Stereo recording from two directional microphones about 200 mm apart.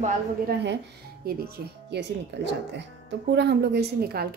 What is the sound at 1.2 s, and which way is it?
Speech, 55° right (ahead or behind).